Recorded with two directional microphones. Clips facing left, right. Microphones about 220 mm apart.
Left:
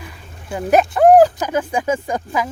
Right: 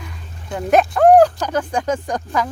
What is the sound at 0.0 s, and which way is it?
Speech, 5° left (ahead or behind).